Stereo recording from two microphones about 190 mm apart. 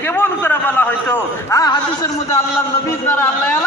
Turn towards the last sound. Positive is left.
turn(degrees=15)  # may be behind; listen again after turning